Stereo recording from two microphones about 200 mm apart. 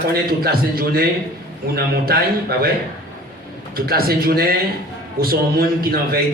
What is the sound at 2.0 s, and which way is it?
Speech, 50° right (ahead or behind).